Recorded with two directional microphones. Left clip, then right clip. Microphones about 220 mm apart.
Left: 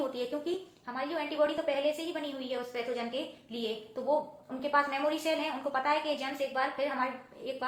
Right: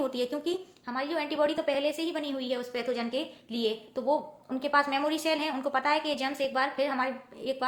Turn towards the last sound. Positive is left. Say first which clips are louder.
# right 5 dB
turn(degrees=-50)  # may be behind; listen again after turning